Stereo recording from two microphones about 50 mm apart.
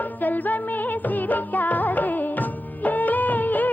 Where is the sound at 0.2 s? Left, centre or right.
Left.